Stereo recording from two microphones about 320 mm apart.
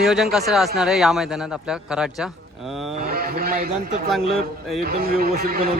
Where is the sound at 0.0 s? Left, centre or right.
Centre.